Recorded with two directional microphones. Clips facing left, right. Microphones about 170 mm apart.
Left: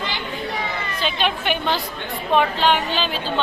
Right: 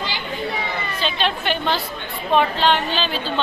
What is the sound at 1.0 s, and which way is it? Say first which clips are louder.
A woman's voice: even; 10° left (ahead or behind).